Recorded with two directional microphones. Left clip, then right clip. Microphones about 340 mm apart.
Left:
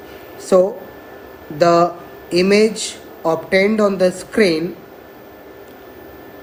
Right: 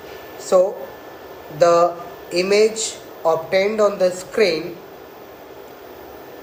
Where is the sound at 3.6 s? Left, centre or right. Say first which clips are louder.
Left 1 dB; left.